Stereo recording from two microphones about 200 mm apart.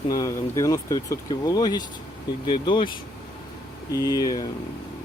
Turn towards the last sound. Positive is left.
turn(degrees=20)  # may be behind; listen again after turning